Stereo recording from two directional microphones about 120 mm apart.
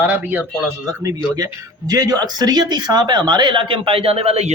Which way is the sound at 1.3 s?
30° right (ahead or behind).